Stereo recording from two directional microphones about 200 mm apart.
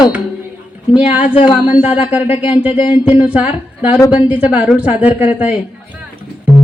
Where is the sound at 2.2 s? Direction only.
30° left (ahead or behind).